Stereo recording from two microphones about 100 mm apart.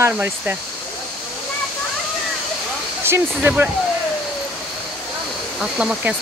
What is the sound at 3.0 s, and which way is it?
Speech, 20° right (ahead or behind).